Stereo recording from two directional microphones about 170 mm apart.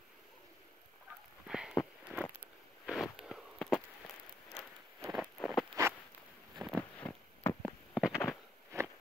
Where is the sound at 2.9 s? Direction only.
Centre (ahead or behind).